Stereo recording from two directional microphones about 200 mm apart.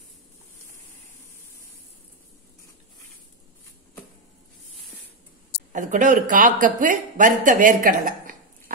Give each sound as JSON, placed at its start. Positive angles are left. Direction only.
{"t": 5.7, "sound": "speech", "side_deg": -40}